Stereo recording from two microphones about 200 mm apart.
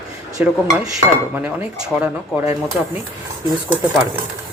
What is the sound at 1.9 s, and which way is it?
Speech, 5° right (ahead or behind).